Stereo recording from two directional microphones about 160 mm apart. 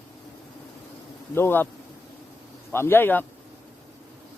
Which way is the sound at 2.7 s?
15° left (ahead or behind).